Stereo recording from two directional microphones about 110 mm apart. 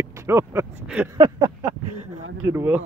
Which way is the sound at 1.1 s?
30° right (ahead or behind).